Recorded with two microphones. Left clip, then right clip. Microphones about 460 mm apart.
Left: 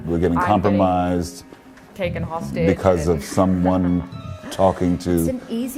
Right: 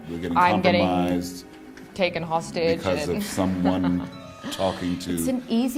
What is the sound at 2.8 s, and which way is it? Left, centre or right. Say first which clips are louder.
A man's voice: left 7 dB; left.